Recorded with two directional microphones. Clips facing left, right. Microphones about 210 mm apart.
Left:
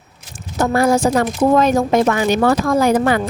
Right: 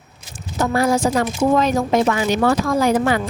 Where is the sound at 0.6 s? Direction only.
50° left (ahead or behind).